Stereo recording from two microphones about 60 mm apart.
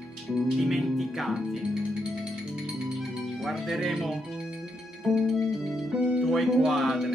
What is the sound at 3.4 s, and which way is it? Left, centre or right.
Speech, centre.